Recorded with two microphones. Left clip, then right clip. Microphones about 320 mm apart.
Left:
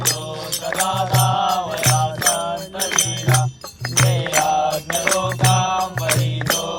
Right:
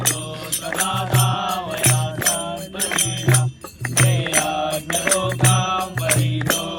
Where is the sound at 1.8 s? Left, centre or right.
Left.